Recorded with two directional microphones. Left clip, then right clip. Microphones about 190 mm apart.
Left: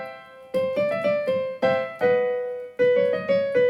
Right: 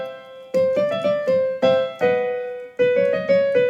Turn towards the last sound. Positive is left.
turn(degrees=-30)  # may be behind; listen again after turning